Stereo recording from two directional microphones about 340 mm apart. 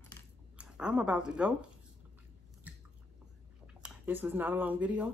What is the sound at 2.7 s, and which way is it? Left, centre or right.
Chewing, centre.